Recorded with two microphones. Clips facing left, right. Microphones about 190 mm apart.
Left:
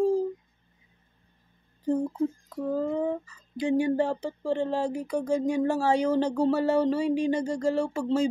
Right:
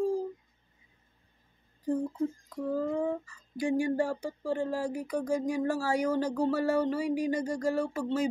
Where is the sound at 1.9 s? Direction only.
65° left (ahead or behind).